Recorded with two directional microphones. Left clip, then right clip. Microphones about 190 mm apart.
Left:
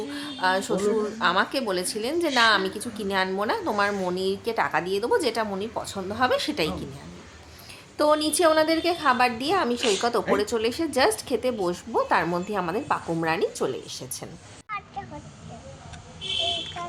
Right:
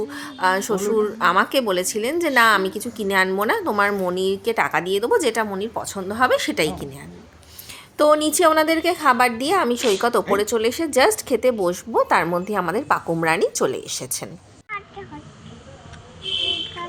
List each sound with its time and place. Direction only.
0.1 s a woman's voice: 20° right (ahead or behind)
7.9 s a woman's voice: 15° right (ahead or behind)